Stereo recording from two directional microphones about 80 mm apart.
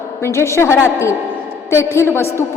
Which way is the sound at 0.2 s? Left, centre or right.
Left.